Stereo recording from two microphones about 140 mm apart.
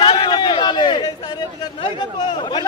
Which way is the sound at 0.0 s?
35° left (ahead or behind).